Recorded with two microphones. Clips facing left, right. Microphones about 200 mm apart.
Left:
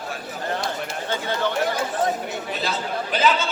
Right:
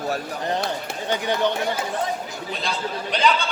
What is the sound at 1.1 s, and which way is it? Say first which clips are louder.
Speech: right 3 dB; 15° right (ahead or behind).